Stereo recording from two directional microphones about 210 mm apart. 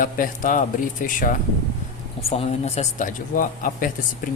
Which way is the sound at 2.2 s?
30° left (ahead or behind).